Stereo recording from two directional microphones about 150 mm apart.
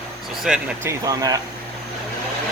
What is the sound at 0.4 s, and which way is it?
Speech, 5° right (ahead or behind).